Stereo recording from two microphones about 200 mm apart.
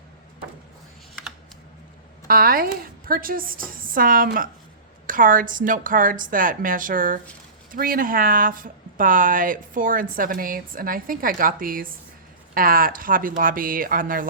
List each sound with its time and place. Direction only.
2.2 s speech: 45° right (ahead or behind)